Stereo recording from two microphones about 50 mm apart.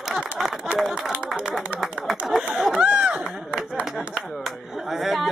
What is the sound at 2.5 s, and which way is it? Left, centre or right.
Speech, centre.